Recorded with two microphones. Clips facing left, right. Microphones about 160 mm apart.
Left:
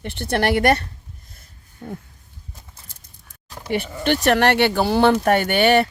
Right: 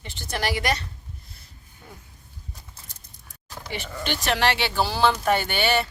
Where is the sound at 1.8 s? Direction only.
45° left (ahead or behind).